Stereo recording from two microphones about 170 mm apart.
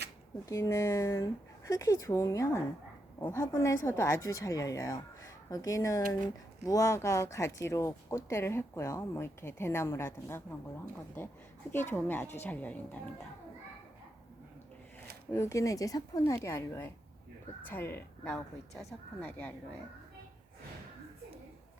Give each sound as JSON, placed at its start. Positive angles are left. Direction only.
{"t": 0.4, "sound": "speech", "side_deg": 20}
{"t": 15.3, "sound": "speech", "side_deg": 15}